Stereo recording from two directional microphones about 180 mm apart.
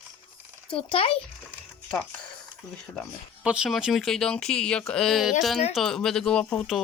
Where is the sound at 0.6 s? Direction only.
30° left (ahead or behind).